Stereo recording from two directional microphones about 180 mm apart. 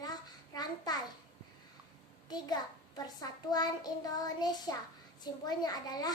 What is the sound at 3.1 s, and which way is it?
A child's voice, 20° left (ahead or behind).